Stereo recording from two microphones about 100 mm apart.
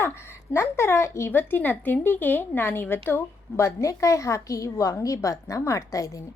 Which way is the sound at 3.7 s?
30° left (ahead or behind).